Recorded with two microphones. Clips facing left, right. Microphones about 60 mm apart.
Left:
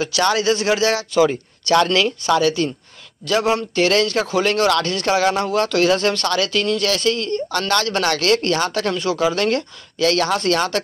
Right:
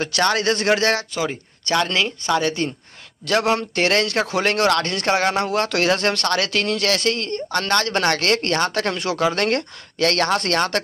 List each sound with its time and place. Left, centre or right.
0.0 s a man's voice: right
1.1 s speech: centre
2.2 s speech: right
3.3 s a man's voice: right